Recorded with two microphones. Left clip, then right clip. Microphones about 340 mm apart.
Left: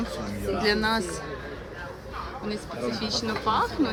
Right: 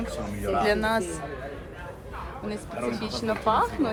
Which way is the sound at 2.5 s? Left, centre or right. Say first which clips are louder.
Right 1 dB; centre.